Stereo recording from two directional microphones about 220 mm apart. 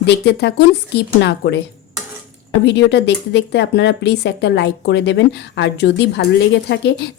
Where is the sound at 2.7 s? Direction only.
50° left (ahead or behind).